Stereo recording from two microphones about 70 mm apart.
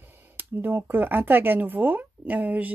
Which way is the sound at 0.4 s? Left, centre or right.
Right.